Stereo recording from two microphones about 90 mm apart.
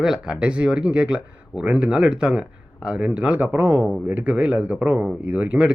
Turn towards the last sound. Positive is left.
turn(degrees=-15)  # may be behind; listen again after turning